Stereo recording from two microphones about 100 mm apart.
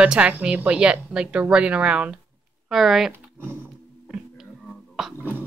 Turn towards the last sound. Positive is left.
turn(degrees=0)  # may be behind; listen again after turning